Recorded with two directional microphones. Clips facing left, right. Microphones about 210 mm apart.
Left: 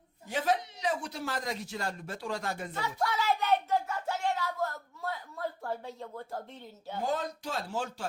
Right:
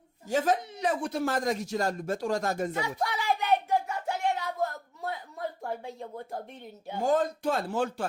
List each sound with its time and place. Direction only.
0.3 s speech: 45° right (ahead or behind)
3.0 s a sound: 15° right (ahead or behind)
5.6 s a woman's voice: 15° right (ahead or behind)
7.0 s a man's voice: 50° right (ahead or behind)